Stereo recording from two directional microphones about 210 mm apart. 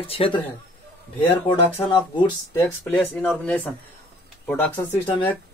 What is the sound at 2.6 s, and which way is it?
Speech, 10° left (ahead or behind).